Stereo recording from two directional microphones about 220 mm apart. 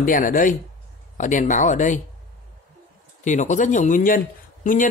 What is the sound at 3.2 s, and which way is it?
A man's voice, 35° left (ahead or behind).